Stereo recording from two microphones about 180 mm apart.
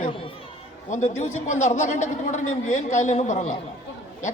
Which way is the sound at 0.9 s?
40° left (ahead or behind).